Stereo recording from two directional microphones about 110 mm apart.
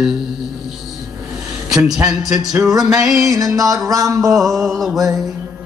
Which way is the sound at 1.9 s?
5° right (ahead or behind).